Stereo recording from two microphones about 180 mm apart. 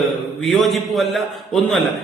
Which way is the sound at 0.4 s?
Centre (ahead or behind).